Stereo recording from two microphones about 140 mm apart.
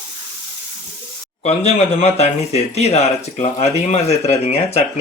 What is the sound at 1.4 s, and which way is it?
Speech, 50° left (ahead or behind).